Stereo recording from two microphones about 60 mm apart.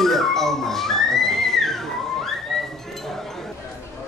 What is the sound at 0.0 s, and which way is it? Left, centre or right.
Music, centre.